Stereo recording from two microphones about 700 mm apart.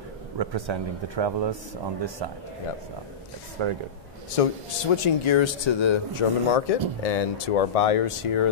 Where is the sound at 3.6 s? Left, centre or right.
Right.